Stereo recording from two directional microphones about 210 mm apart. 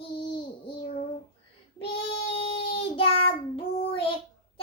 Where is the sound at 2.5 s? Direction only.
25° left (ahead or behind).